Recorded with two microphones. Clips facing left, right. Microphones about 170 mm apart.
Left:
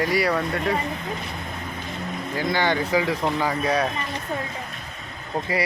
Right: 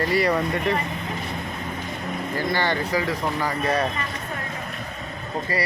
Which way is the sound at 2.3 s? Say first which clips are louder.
Left 2 dB; 15° left (ahead or behind).